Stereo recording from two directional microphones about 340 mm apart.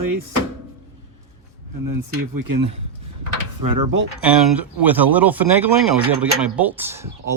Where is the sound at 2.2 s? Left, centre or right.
Right.